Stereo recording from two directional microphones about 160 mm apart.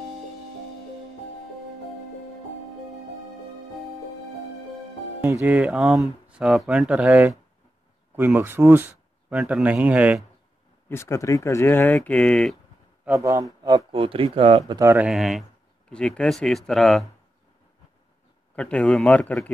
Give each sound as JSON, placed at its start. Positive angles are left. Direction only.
{"t": 5.2, "sound": "speech", "side_deg": -10}
{"t": 10.9, "sound": "speech", "side_deg": 15}
{"t": 13.0, "sound": "a man's voice", "side_deg": -15}
{"t": 13.7, "sound": "speech", "side_deg": -30}
{"t": 14.8, "sound": "speech", "side_deg": -15}
{"t": 15.0, "sound": "speech", "side_deg": 0}
{"t": 18.6, "sound": "speech", "side_deg": 5}